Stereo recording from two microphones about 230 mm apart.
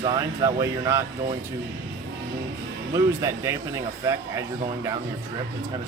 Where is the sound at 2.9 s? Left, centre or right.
Centre.